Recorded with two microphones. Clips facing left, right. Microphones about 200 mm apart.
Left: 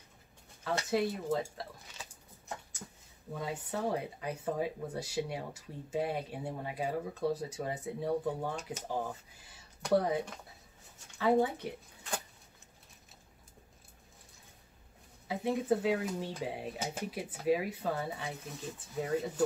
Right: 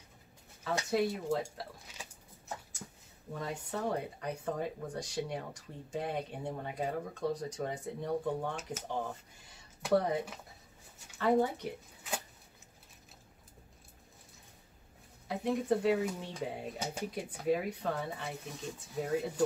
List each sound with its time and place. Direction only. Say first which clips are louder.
0.8 s speech: right 1 dB; centre (ahead or behind)
2.8 s a sound: even; 5° right (ahead or behind)
3.3 s speech: left 1 dB; 5° left (ahead or behind)
11.1 s dishes: left 1 dB; 5° left (ahead or behind)
15.2 s speech: left 1 dB; 5° left (ahead or behind)